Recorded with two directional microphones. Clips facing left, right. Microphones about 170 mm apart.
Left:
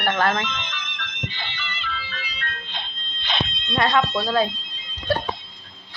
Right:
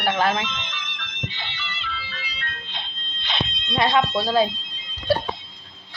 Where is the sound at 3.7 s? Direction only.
15° right (ahead or behind).